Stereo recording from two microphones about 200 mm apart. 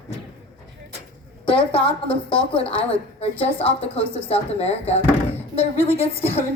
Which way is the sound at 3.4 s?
30° left (ahead or behind).